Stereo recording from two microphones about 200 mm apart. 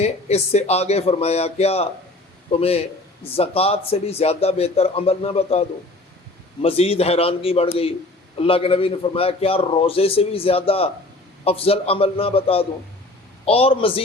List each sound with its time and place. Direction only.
0.0 s a man's voice: 30° left (ahead or behind)